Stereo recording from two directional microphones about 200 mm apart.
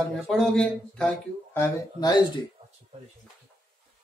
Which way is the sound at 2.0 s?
20° left (ahead or behind).